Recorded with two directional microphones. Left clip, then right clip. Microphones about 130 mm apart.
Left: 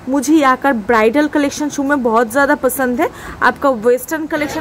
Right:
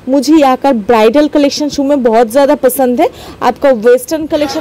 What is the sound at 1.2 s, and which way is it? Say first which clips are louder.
Speech: right 6 dB; 25° right (ahead or behind).